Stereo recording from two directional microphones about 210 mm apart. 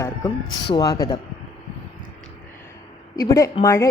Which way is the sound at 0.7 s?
20° left (ahead or behind).